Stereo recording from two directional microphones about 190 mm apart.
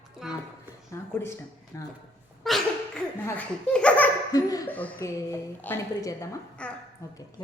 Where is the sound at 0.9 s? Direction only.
15° left (ahead or behind).